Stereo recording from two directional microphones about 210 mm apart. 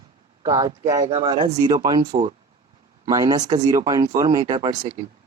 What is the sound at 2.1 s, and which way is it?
Speech, 30° right (ahead or behind).